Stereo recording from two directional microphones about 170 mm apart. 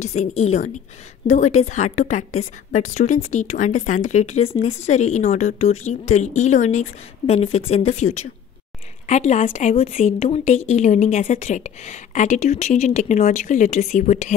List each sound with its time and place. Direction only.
0.0 s a woman's voice: 40° left (ahead or behind)